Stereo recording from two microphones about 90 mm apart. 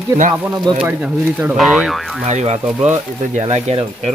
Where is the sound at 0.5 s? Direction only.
55° right (ahead or behind).